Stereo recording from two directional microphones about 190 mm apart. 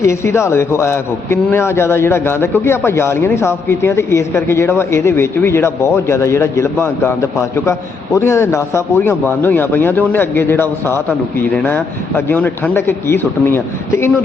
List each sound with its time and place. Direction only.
0.0 s a man's voice: 15° left (ahead or behind)